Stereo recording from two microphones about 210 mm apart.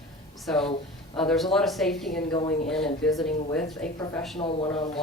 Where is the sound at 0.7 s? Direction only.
25° left (ahead or behind).